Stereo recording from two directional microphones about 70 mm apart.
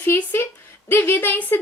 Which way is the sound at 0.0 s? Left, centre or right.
Left.